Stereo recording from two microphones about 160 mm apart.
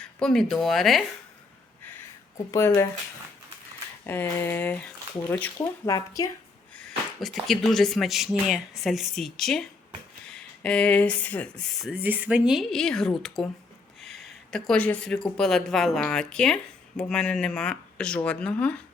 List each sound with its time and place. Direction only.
0.2 s speech: 5° left (ahead or behind)
2.5 s speech: 15° left (ahead or behind)
4.0 s speech: 15° left (ahead or behind)
5.5 s speech: 20° left (ahead or behind)
6.7 s speech: centre (ahead or behind)
11.9 s speech: 10° right (ahead or behind); by 18.8 s 5° left (ahead or behind)